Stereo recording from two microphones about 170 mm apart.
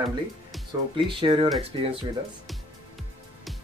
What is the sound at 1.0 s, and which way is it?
Speech, 30° right (ahead or behind).